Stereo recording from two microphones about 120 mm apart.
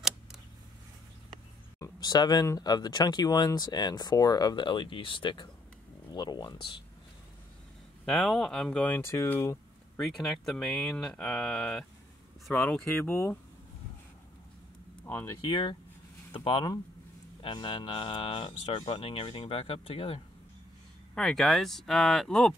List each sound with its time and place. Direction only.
1.8 s speech: 35° left (ahead or behind)
8.0 s speech: centre (ahead or behind); by 9.6 s 25° left (ahead or behind)
9.9 s speech: centre (ahead or behind)
12.9 s speech: 20° left (ahead or behind)
15.0 s speech: 15° left (ahead or behind)
15.4 s speech: 40° left (ahead or behind)
21.1 s speech: 5° left (ahead or behind)